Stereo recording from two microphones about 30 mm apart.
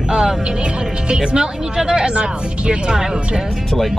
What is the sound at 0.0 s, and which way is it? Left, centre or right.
Speech, right.